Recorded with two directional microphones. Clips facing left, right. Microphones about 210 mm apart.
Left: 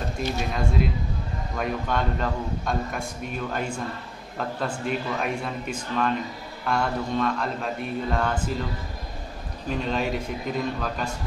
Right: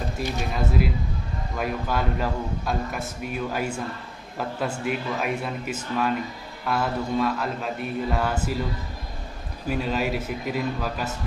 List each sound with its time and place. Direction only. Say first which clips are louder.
0.2 s a man's voice: left 1 dB; 5° right (ahead or behind)
9.7 s a man's voice: right 1 dB; 5° right (ahead or behind)